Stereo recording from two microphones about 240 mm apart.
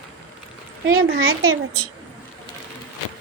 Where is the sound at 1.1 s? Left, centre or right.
Right.